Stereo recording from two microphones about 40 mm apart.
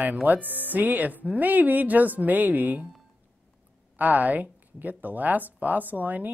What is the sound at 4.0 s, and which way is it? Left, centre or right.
Speech, right.